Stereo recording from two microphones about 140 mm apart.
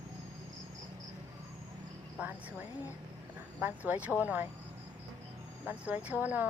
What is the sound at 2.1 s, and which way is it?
Speech, 10° right (ahead or behind).